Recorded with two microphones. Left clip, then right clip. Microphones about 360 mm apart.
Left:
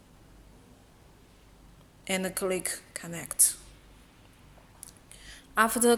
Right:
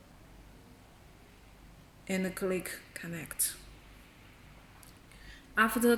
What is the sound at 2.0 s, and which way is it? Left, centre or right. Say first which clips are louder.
Speech: left 4 dB; left.